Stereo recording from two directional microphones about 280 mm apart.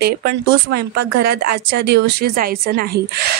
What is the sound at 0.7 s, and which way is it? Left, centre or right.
Speech, right.